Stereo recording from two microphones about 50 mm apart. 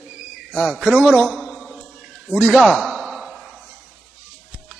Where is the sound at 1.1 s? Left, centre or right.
Centre.